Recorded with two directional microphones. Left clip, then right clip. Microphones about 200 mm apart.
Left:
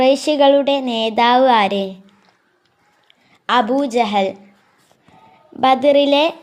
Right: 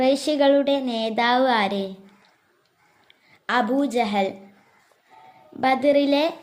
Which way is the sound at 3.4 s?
20° left (ahead or behind).